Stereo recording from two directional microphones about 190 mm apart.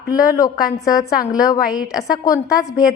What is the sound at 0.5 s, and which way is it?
Speech, 50° left (ahead or behind).